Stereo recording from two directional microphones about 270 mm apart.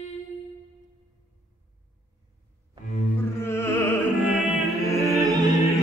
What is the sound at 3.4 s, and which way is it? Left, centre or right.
Music, centre.